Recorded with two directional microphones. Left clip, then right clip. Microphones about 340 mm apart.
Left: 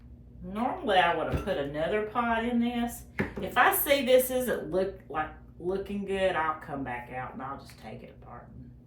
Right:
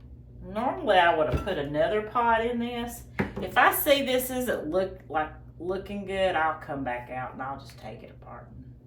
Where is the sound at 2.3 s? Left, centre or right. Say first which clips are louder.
Right 4 dB; centre.